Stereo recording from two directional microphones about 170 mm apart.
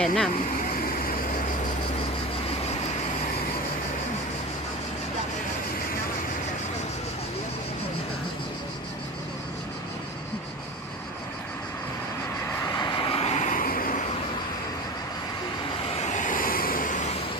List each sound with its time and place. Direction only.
0.0 s speech: 5° left (ahead or behind)
0.7 s vehicle: 55° left (ahead or behind)
12.7 s vehicle: 25° left (ahead or behind); by 14.0 s 55° left (ahead or behind)
15.9 s vehicle: 40° left (ahead or behind)